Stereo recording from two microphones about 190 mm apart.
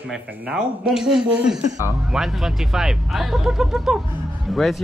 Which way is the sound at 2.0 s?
Centre (ahead or behind).